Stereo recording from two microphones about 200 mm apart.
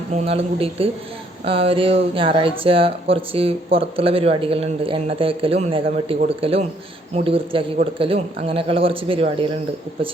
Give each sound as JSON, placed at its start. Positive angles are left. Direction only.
{"t": 0.1, "sound": "speech", "side_deg": -30}